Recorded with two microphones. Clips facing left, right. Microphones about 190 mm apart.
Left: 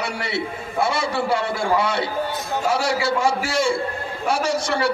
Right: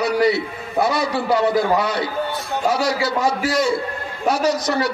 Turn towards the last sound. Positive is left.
turn(degrees=30)  # may be behind; listen again after turning